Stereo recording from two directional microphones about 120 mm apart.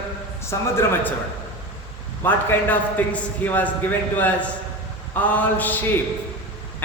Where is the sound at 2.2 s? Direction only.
15° left (ahead or behind).